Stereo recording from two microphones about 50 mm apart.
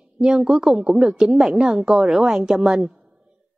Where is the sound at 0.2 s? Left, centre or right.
Centre.